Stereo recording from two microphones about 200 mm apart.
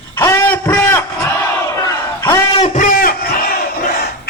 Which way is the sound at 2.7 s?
40° left (ahead or behind).